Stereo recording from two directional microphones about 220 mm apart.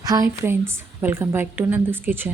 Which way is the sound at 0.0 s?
15° right (ahead or behind).